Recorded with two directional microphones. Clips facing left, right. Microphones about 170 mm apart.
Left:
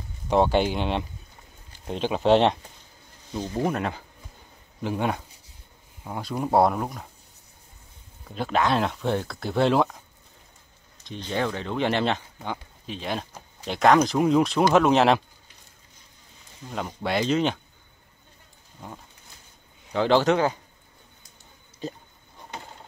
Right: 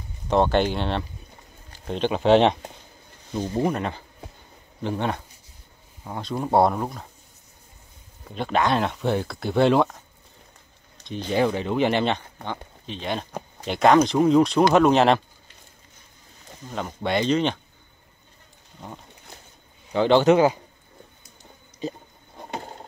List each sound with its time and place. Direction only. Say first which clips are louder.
0.3 s speech: right 1 dB; 10° left (ahead or behind)
3.6 s speech: right 1 dB; centre (ahead or behind)
8.4 s speech: right 1 dB; centre (ahead or behind)
11.1 s speech: right 5 dB; 10° right (ahead or behind)
16.6 s speech: right 1 dB; centre (ahead or behind)
19.9 s speech: right 3 dB; centre (ahead or behind)
21.8 s speech: right 3 dB; centre (ahead or behind)
22.5 s a sound: right 6 dB; 45° right (ahead or behind)